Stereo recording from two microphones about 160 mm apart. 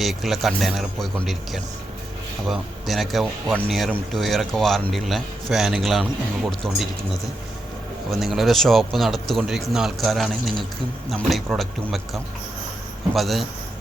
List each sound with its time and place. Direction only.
0.0 s a man's voice: centre (ahead or behind)
8.1 s a man's voice: centre (ahead or behind)